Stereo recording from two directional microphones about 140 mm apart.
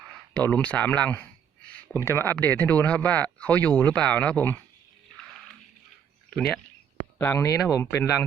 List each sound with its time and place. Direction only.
0.3 s speech: 10° left (ahead or behind)
6.3 s speech: 5° left (ahead or behind)
7.2 s speech: 15° left (ahead or behind)